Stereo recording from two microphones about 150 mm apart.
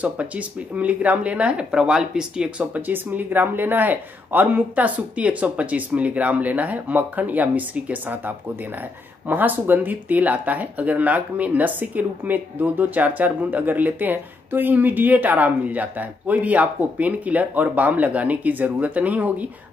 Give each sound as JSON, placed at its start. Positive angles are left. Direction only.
{"t": 0.0, "sound": "speech", "side_deg": -10}